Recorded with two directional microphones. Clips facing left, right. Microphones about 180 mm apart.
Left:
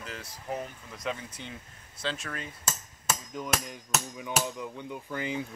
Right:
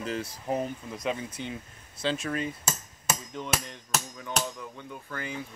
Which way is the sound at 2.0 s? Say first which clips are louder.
Right 6 dB; 15° right (ahead or behind).